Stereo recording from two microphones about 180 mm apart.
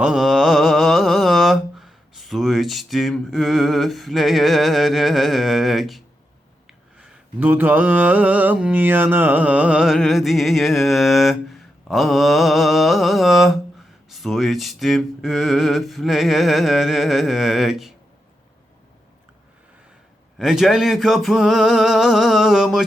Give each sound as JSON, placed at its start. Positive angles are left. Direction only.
{"t": 0.0, "sound": "mantra", "side_deg": -5}
{"t": 7.0, "sound": "mantra", "side_deg": -10}
{"t": 20.4, "sound": "mantra", "side_deg": 0}